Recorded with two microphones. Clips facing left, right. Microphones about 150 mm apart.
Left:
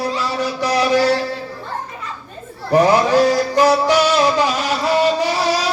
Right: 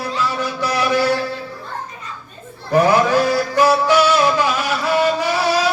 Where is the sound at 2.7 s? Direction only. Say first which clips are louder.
Left 1 dB; 15° left (ahead or behind).